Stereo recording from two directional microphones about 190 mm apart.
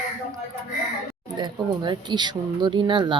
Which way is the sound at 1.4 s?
25° right (ahead or behind).